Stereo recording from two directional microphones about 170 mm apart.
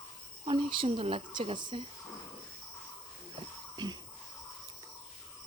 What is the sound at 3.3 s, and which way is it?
Wheeze, 25° right (ahead or behind).